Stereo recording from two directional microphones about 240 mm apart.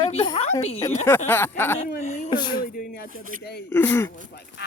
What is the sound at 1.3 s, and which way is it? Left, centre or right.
Speech, centre.